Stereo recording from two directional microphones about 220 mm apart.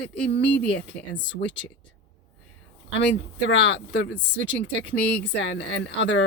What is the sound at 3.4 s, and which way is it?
Speech, 55° left (ahead or behind).